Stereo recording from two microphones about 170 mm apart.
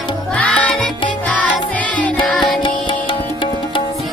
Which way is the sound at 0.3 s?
10° left (ahead or behind).